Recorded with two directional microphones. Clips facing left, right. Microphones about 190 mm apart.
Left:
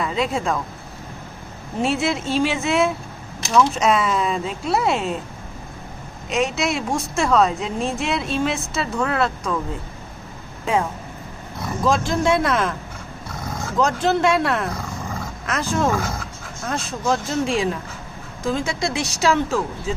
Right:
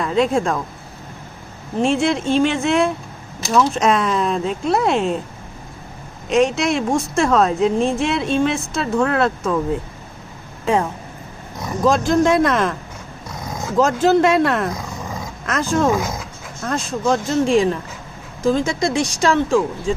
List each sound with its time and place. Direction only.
0.0 s a woman's voice: centre (ahead or behind)
1.8 s a woman's voice: 5° left (ahead or behind)
6.2 s a woman's voice: centre (ahead or behind)
11.9 s a woman's voice: centre (ahead or behind)
13.7 s a woman's voice: centre (ahead or behind)
15.9 s speech: 15° right (ahead or behind)
16.6 s a woman's voice: centre (ahead or behind)